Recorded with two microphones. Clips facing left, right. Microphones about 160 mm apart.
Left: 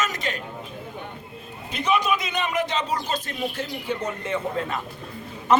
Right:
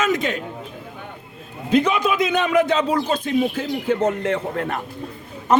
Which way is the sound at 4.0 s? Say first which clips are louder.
Right 7 dB; 75° right (ahead or behind).